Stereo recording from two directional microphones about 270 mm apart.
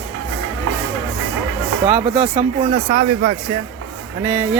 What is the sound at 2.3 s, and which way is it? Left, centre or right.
Speech, right.